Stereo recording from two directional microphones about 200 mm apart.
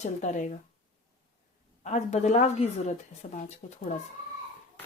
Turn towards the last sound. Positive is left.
turn(degrees=35)  # may be behind; listen again after turning